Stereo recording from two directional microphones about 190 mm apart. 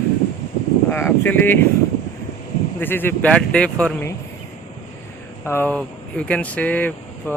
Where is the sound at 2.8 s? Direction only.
10° left (ahead or behind).